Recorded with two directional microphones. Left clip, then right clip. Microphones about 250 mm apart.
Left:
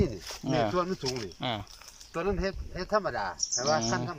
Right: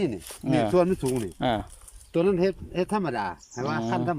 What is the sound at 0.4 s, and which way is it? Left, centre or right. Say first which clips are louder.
Speech: right 6 dB; centre.